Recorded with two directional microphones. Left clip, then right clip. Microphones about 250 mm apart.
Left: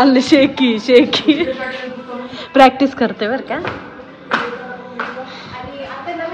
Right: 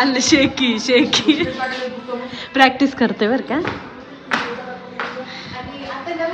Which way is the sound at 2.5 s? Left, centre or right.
Centre.